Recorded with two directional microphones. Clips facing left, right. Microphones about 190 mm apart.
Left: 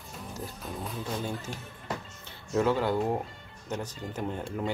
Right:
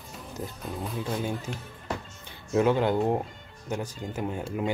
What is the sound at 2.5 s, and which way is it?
Speech, 20° right (ahead or behind).